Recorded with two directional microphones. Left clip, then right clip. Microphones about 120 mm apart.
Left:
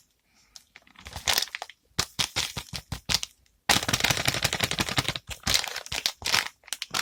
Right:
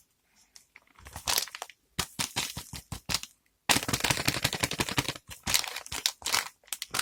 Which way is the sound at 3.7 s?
45° left (ahead or behind).